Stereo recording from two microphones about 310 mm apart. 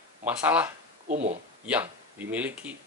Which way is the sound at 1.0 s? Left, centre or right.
Right.